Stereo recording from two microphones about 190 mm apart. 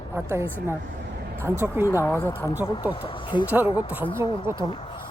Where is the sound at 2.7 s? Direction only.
25° left (ahead or behind).